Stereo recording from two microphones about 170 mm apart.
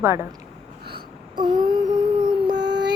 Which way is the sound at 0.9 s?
30° right (ahead or behind).